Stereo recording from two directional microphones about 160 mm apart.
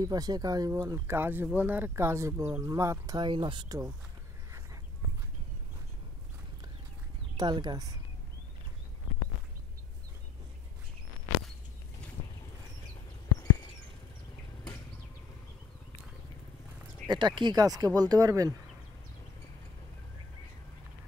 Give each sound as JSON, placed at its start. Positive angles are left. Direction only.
{"t": 0.0, "sound": "speech", "side_deg": -25}
{"t": 7.3, "sound": "speech", "side_deg": -25}
{"t": 17.1, "sound": "speech", "side_deg": -30}